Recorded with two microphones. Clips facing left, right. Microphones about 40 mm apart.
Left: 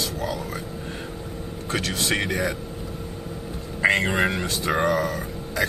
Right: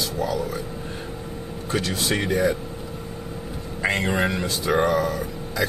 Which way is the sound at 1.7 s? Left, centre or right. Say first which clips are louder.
Right 1 dB; left.